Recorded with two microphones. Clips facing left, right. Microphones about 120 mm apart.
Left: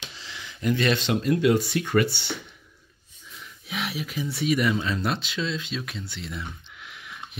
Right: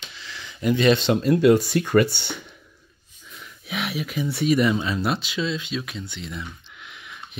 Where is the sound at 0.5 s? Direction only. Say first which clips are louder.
Right 5 dB; 15° right (ahead or behind).